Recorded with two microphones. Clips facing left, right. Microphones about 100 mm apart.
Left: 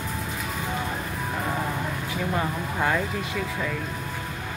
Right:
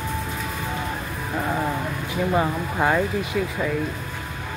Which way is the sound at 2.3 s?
25° right (ahead or behind).